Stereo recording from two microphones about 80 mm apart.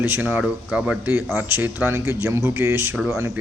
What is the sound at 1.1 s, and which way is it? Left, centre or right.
Speech, right.